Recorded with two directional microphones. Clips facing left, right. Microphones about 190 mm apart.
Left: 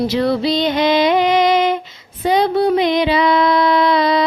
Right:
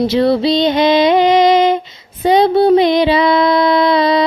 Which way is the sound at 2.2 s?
25° right (ahead or behind).